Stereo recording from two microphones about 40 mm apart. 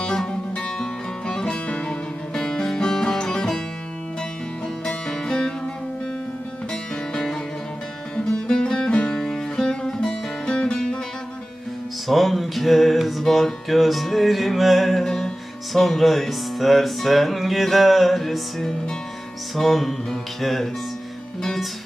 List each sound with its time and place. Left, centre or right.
0.0 s music: centre
4.9 s music: centre
7.1 s music: centre
12.0 s music: centre